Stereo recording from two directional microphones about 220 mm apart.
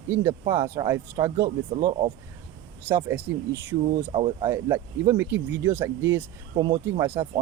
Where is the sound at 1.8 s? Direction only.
30° right (ahead or behind).